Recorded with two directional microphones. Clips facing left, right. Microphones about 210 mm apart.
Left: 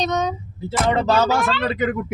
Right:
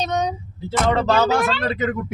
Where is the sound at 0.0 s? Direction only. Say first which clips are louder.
Left 1 dB; 10° right (ahead or behind).